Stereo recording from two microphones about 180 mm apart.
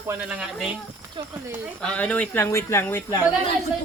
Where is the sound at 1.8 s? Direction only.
5° left (ahead or behind).